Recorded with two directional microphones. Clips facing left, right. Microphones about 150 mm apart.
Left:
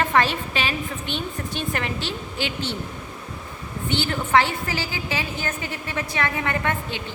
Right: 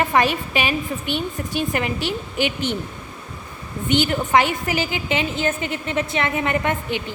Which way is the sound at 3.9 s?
15° right (ahead or behind).